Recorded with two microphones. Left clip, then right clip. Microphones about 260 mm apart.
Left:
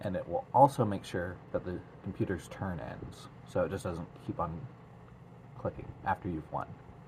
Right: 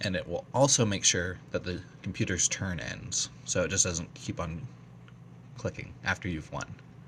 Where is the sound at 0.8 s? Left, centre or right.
Right.